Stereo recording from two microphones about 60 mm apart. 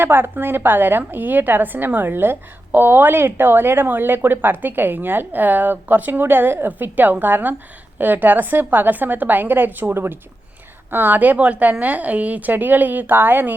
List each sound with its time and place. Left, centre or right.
0.0 s a woman's voice: right